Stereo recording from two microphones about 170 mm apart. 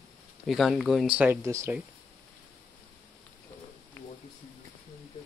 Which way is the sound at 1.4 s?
15° right (ahead or behind).